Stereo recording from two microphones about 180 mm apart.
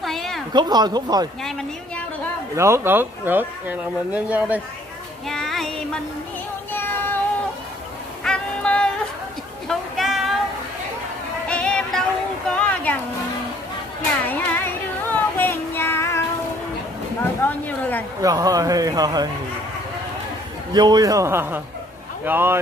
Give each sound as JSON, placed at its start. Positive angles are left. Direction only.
{"t": 0.0, "sound": "a sound", "side_deg": 0}
{"t": 0.5, "sound": "speech", "side_deg": -25}
{"t": 2.5, "sound": "speech", "side_deg": -15}
{"t": 5.3, "sound": "child singing", "side_deg": 0}
{"t": 6.7, "sound": "music", "side_deg": 10}
{"t": 8.2, "sound": "music", "side_deg": 5}
{"t": 9.7, "sound": "a sound", "side_deg": 0}
{"t": 11.4, "sound": "music", "side_deg": 5}
{"t": 12.4, "sound": "a sound", "side_deg": 5}
{"t": 14.2, "sound": "child singing", "side_deg": 10}
{"t": 17.2, "sound": "a sound", "side_deg": 10}
{"t": 18.2, "sound": "speech", "side_deg": -20}
{"t": 20.7, "sound": "speech", "side_deg": -20}